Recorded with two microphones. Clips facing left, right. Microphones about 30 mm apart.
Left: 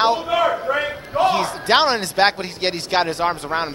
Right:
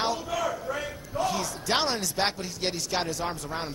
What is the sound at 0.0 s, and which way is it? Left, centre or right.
A man's voice, left.